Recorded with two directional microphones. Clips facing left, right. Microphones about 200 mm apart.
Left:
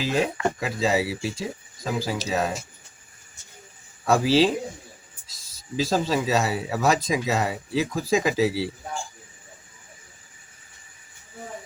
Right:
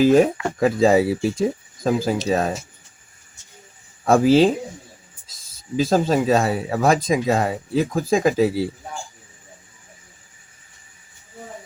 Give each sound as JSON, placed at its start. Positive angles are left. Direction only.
{"t": 0.0, "sound": "speech", "side_deg": -50}
{"t": 4.0, "sound": "speech", "side_deg": -50}
{"t": 5.7, "sound": "speech", "side_deg": -50}